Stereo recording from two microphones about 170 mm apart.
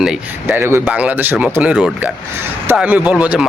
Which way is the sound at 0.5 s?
15° right (ahead or behind).